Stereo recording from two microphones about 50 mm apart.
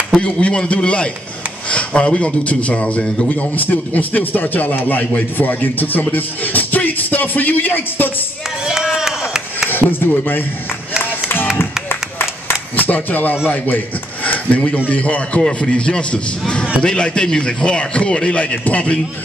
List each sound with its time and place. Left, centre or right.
0.1 s a man's voice: left
8.6 s chop: centre
9.7 s speech: left
11.0 s music: left
11.9 s a sound: left
13.5 s a man's voice: left